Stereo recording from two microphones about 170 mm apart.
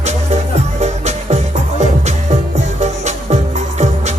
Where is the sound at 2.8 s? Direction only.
40° right (ahead or behind).